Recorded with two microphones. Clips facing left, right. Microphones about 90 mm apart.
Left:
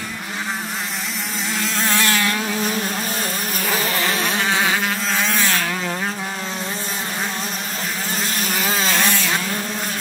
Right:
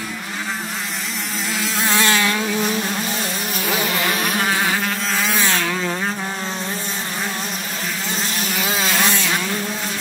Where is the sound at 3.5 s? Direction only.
40° left (ahead or behind).